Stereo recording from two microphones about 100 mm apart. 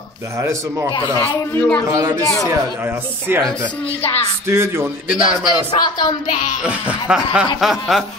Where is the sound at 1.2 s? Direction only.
25° left (ahead or behind).